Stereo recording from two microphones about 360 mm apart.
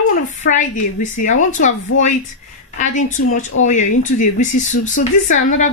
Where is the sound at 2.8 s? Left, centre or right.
Centre.